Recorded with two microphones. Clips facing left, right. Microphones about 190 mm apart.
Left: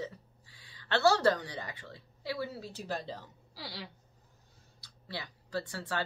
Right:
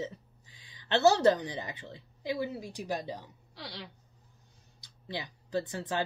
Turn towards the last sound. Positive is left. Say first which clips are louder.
# right 4 dB
turn(degrees=-20)  # may be behind; listen again after turning